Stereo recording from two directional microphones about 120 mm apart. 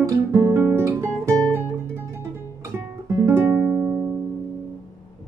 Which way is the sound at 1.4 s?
20° right (ahead or behind).